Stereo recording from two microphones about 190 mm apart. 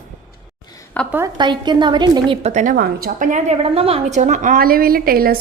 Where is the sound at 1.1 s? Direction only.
20° right (ahead or behind); by 2.7 s 40° right (ahead or behind).